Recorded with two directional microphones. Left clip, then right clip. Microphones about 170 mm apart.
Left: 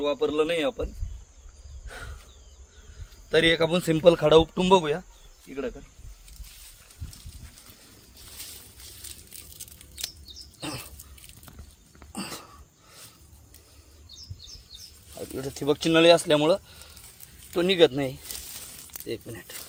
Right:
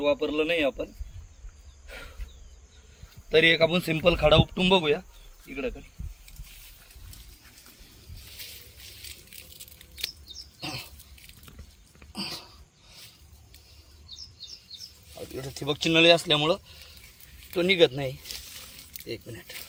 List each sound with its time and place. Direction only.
0.0 s a man's voice: 25° left (ahead or behind)
3.2 s a man's voice: 25° left (ahead or behind)
10.6 s dog: 60° left (ahead or behind)
12.1 s a sound: 70° left (ahead or behind)
15.4 s speech: 90° left
19.0 s speech: 80° left